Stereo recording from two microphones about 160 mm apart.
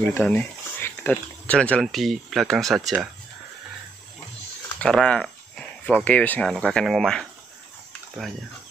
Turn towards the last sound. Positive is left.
turn(degrees=0)  # may be behind; listen again after turning